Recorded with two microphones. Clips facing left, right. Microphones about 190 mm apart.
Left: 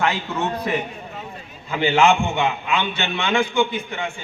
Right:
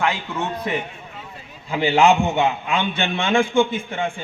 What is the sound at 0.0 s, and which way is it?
Speech, 15° right (ahead or behind).